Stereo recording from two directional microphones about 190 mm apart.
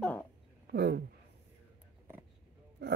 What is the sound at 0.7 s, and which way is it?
Speech, 60° right (ahead or behind).